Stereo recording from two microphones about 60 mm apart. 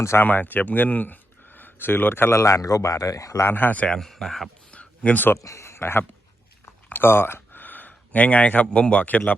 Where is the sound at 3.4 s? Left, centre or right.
Left.